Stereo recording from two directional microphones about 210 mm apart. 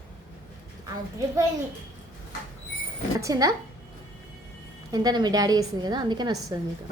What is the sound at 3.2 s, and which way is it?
Speech, 15° right (ahead or behind).